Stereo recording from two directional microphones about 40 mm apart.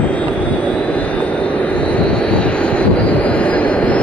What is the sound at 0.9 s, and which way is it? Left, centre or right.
Vehicle, left.